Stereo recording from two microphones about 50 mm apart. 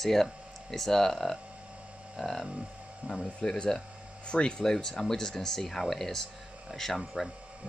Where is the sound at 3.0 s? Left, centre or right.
Right.